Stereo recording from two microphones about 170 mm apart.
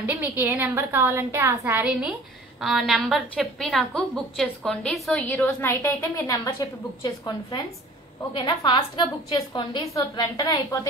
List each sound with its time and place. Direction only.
0.0 s a woman's voice: 10° right (ahead or behind); by 10.9 s 20° left (ahead or behind)